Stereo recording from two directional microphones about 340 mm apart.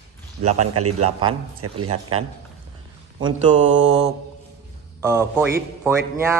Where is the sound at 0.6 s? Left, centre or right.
Right.